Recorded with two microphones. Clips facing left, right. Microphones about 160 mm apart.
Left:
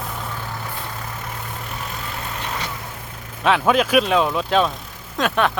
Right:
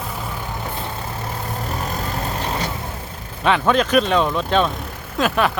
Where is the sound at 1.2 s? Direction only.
40° right (ahead or behind).